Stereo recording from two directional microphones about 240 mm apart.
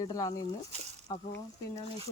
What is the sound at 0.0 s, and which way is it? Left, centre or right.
Speech, centre.